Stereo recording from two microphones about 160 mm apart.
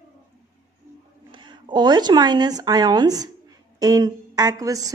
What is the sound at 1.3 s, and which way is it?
A woman's voice, 30° right (ahead or behind).